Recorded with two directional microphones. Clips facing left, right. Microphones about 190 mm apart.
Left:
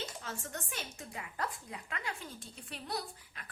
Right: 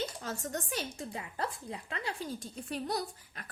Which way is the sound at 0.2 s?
40° right (ahead or behind).